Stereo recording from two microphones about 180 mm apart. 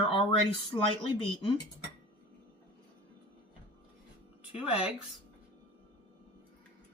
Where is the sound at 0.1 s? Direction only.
30° left (ahead or behind).